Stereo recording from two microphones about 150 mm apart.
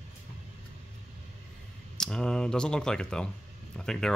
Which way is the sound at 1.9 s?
5° left (ahead or behind).